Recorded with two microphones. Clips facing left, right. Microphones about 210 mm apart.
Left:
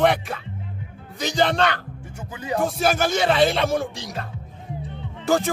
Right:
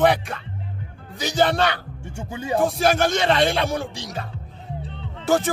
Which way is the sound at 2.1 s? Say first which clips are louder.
Right 2 dB; 30° right (ahead or behind).